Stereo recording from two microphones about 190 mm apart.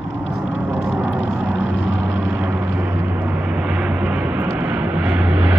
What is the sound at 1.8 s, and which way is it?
Vehicle, 85° left.